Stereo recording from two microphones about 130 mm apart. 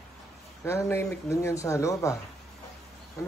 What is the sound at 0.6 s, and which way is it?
Speech, 20° left (ahead or behind).